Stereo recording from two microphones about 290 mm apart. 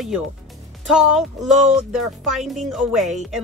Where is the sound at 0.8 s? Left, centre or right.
Centre.